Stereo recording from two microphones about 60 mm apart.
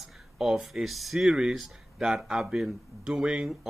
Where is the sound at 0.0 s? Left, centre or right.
Centre.